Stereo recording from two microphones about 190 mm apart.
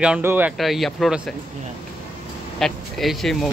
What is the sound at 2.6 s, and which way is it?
Speech, centre (ahead or behind).